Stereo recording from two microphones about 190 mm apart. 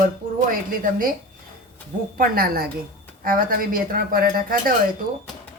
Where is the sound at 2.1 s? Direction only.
50° right (ahead or behind).